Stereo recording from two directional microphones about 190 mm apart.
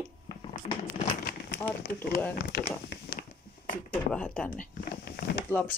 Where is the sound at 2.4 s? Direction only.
55° left (ahead or behind).